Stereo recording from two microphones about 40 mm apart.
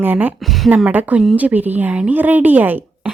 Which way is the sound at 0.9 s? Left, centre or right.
Right.